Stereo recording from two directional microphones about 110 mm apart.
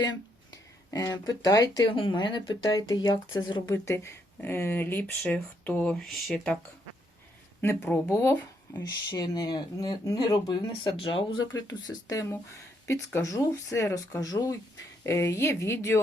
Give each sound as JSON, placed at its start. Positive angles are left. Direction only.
{"t": 0.5, "sound": "speech", "side_deg": 30}
{"t": 2.0, "sound": "speech", "side_deg": 45}
{"t": 2.6, "sound": "speech", "side_deg": 35}
{"t": 3.7, "sound": "speech", "side_deg": 25}
{"t": 7.6, "sound": "speech", "side_deg": 20}
{"t": 8.1, "sound": "speech", "side_deg": 30}
{"t": 10.9, "sound": "speech", "side_deg": 50}